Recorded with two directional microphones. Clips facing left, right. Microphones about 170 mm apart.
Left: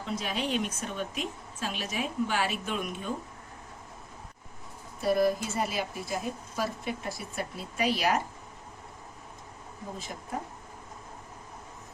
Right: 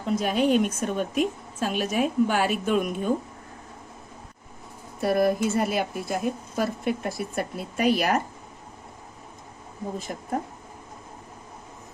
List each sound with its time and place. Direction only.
0.0 s a woman's voice: 50° right (ahead or behind)
4.9 s speech: 60° right (ahead or behind)
10.1 s a woman's voice: 50° right (ahead or behind)